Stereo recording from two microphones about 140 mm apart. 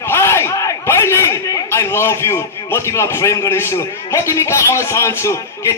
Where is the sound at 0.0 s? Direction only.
15° left (ahead or behind).